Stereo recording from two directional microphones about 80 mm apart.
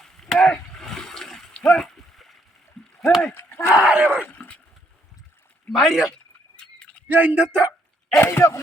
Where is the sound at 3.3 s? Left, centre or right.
Left.